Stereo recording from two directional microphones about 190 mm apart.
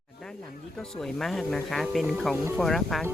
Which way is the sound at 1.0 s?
Centre (ahead or behind).